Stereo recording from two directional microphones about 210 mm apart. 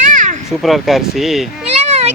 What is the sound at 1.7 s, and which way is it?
Cat, 30° right (ahead or behind).